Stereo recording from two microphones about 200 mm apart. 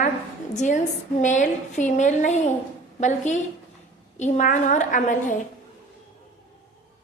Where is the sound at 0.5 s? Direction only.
35° left (ahead or behind).